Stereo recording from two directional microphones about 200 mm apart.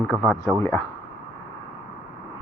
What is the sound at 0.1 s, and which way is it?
Speech, 15° right (ahead or behind).